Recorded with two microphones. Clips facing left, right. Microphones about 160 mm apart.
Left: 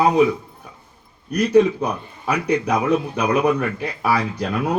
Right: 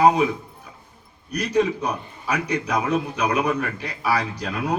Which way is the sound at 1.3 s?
55° left (ahead or behind).